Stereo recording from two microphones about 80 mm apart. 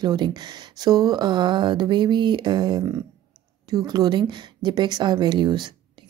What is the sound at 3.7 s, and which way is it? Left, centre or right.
A woman's voice, right.